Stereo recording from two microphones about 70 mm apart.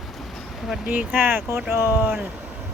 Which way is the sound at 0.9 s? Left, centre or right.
Right.